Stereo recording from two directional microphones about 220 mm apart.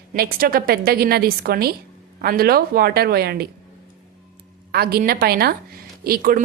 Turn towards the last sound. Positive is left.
turn(degrees=-40)  # may be behind; listen again after turning